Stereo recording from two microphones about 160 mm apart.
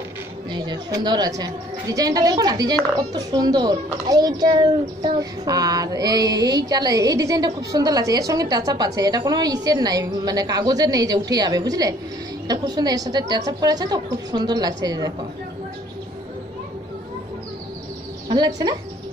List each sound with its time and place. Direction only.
0.5 s a child's voice: 25° right (ahead or behind)
18.3 s a child's voice: 25° right (ahead or behind)